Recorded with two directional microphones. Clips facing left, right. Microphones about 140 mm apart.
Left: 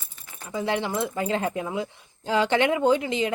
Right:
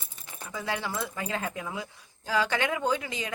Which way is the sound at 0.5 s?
25° left (ahead or behind).